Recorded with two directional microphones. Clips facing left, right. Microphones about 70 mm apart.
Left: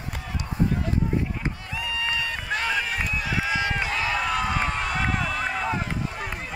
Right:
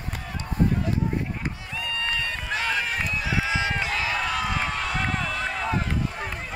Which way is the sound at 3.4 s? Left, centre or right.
Centre.